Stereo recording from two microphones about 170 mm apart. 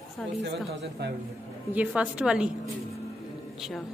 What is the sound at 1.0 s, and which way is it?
Speech, 85° right.